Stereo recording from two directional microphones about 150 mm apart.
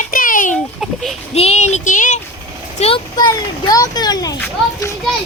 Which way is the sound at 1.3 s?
45° left (ahead or behind).